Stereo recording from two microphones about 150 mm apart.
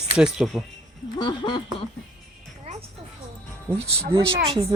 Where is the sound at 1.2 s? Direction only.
30° left (ahead or behind).